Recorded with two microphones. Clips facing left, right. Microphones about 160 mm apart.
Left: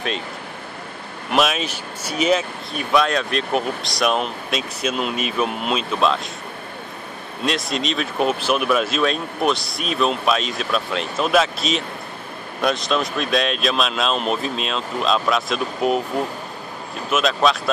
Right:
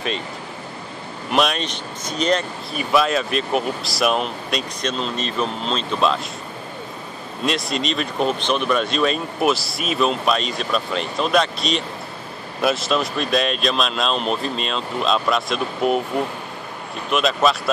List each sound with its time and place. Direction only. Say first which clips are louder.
1.3 s speech: even; centre (ahead or behind)
7.4 s speech: even; centre (ahead or behind)
17.1 s speech: even; centre (ahead or behind)